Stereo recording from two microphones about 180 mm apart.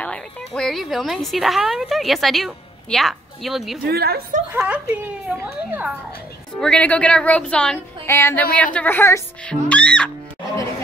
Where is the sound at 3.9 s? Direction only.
60° right (ahead or behind).